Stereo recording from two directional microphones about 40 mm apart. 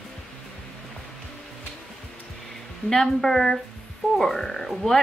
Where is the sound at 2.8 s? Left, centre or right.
Centre.